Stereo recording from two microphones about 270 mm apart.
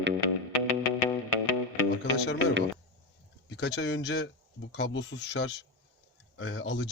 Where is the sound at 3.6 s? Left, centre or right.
Left.